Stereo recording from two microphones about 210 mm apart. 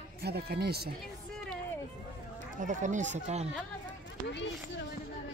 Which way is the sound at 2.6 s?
35° right (ahead or behind).